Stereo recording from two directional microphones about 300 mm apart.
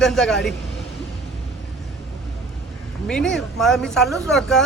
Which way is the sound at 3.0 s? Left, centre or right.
Centre.